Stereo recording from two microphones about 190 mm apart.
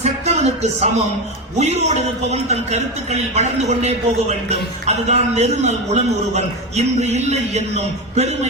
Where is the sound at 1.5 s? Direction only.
35° right (ahead or behind).